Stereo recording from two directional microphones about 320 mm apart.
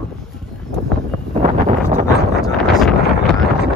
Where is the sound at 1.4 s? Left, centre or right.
Right.